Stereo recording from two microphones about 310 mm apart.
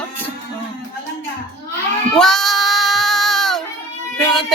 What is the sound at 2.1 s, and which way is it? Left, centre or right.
Child singing, centre.